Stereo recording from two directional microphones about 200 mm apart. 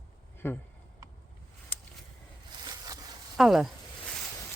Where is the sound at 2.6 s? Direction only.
20° right (ahead or behind).